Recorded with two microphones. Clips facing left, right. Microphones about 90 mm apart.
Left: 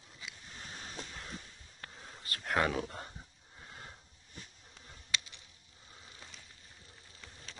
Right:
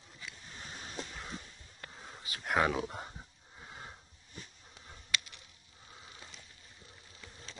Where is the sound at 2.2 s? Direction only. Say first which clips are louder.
Right 1 dB; 10° right (ahead or behind).